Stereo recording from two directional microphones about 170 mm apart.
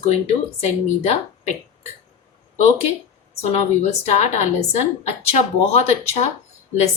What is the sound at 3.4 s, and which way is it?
A woman's voice, 40° left (ahead or behind).